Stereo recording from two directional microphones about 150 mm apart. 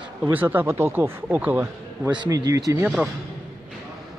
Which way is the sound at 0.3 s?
10° right (ahead or behind).